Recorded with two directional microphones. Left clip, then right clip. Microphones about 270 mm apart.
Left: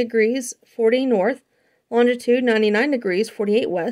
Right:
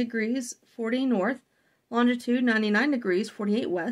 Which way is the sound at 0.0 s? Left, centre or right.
Left.